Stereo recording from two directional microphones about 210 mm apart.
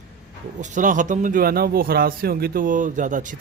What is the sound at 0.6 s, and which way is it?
Speech, 35° right (ahead or behind).